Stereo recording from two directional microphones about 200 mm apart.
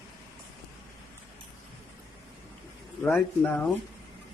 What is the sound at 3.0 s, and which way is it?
Speech, 5° left (ahead or behind).